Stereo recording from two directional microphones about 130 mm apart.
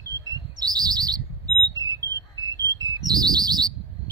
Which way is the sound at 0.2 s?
30° right (ahead or behind).